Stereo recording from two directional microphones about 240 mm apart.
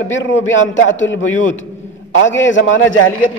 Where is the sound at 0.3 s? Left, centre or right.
Left.